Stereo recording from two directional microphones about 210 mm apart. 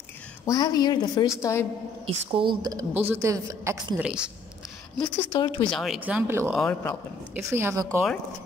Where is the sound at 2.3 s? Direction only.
20° right (ahead or behind).